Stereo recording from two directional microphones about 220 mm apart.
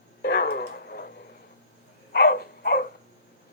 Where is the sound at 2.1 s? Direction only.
45° left (ahead or behind).